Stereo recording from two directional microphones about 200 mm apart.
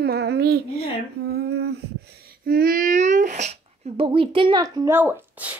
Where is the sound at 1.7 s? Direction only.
55° right (ahead or behind); by 5.5 s 10° right (ahead or behind).